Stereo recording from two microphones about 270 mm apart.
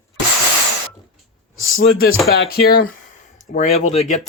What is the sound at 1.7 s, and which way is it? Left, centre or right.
Speech, left.